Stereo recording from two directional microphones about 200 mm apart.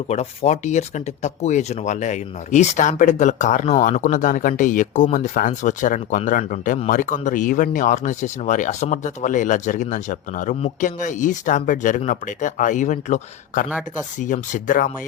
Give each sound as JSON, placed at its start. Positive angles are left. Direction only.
{"t": 0.1, "sound": "speech", "side_deg": 35}